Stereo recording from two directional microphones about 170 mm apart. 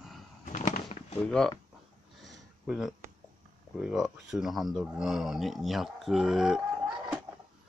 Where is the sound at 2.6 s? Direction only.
5° right (ahead or behind).